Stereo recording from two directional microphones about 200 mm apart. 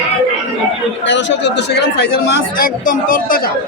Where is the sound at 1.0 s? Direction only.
65° left (ahead or behind); by 3.5 s 45° left (ahead or behind).